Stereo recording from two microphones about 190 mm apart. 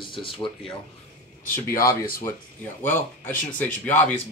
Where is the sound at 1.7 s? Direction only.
50° left (ahead or behind).